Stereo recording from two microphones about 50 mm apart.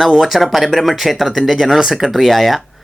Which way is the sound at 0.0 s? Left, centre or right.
Centre.